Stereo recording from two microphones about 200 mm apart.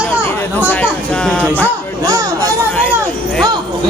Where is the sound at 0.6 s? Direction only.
10° left (ahead or behind).